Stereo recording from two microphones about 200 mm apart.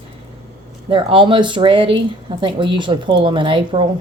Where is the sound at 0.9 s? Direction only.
25° right (ahead or behind).